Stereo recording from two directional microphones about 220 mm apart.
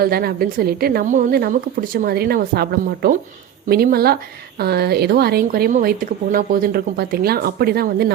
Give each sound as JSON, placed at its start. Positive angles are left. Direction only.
{"t": 0.0, "sound": "a woman's voice", "side_deg": -45}